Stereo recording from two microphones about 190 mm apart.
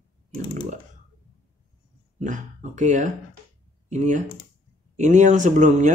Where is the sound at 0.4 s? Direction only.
35° right (ahead or behind).